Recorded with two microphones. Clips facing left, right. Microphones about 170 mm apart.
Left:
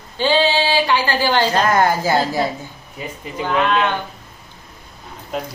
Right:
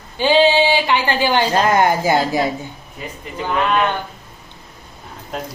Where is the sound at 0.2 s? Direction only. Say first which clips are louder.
Right 3 dB; 15° right (ahead or behind).